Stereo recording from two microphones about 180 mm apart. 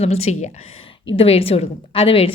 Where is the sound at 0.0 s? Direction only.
35° left (ahead or behind).